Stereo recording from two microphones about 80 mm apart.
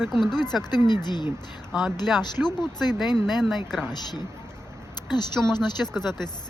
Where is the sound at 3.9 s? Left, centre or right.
Left.